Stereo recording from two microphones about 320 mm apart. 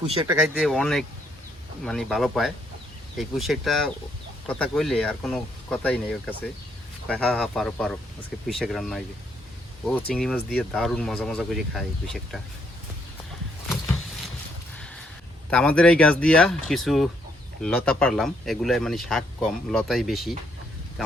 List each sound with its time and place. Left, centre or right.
0.1 s speech: centre
0.3 s speech: centre
15.4 s speech: centre